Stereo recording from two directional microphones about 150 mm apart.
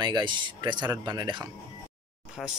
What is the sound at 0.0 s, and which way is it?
Speech, 30° right (ahead or behind).